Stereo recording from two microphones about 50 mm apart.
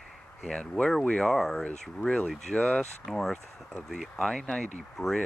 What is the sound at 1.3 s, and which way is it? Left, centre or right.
Speech, centre.